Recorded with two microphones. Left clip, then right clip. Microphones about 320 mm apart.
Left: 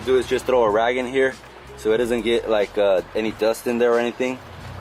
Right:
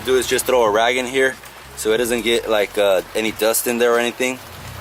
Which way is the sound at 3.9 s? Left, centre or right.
Centre.